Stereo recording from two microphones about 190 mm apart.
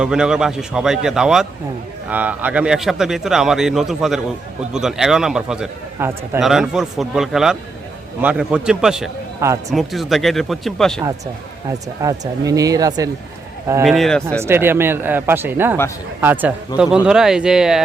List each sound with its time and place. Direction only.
0.0 s speech: 5° right (ahead or behind)
9.4 s speech: 15° right (ahead or behind)
9.7 s speech: centre (ahead or behind)
11.7 s speech: 20° right (ahead or behind)
13.8 s speech: centre (ahead or behind)
14.4 s speech: 10° right (ahead or behind)